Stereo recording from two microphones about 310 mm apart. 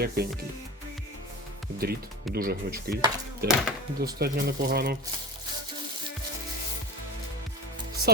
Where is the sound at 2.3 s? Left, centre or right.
Right.